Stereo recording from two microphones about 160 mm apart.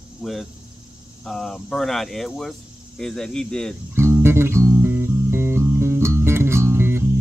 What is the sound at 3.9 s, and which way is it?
Music, 15° right (ahead or behind).